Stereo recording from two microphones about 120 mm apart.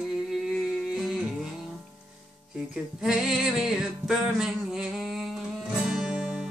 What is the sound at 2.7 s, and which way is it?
Music, centre (ahead or behind).